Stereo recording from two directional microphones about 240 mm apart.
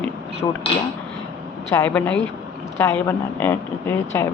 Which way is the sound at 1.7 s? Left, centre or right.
Centre.